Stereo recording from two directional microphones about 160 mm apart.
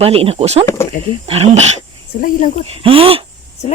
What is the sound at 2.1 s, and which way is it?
Speech, 70° left (ahead or behind).